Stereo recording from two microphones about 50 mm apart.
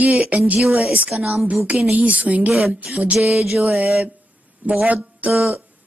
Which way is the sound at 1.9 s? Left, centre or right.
Right.